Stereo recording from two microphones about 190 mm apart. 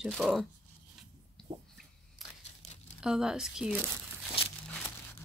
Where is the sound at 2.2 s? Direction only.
Centre (ahead or behind).